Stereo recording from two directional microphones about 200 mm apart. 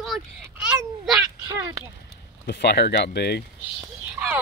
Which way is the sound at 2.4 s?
55° left (ahead or behind).